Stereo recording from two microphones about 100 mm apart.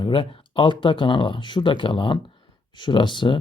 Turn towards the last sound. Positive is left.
turn(degrees=55)  # may be behind; listen again after turning